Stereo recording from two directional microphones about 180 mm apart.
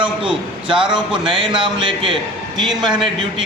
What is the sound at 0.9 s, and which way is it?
Speech, 5° right (ahead or behind).